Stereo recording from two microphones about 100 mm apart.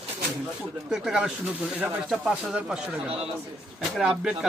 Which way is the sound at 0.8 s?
5° right (ahead or behind).